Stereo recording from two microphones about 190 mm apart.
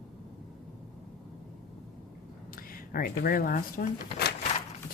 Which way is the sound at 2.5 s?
50° left (ahead or behind).